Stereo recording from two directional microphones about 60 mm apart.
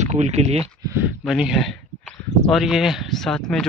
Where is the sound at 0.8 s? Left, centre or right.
Right.